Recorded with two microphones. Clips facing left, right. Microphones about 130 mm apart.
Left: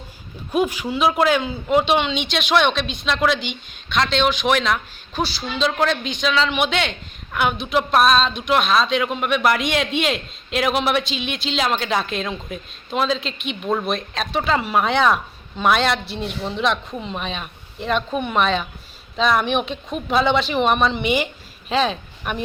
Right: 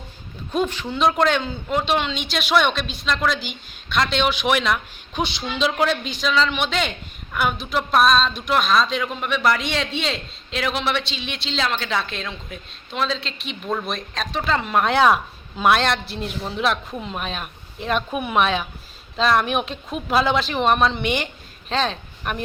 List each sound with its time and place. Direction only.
0.5 s speech: 10° left (ahead or behind)
5.1 s speech: 15° right (ahead or behind)
5.6 s speech: 5° right (ahead or behind); by 9.6 s 10° left (ahead or behind)
9.9 s a man's voice: 35° right (ahead or behind)
10.6 s speech: 15° left (ahead or behind)
13.5 s speech: 5° left (ahead or behind)